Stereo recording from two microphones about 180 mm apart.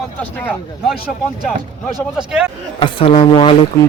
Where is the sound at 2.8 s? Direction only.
30° left (ahead or behind).